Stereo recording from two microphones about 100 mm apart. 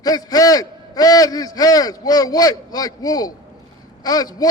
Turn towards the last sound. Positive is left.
turn(degrees=40)  # may be behind; listen again after turning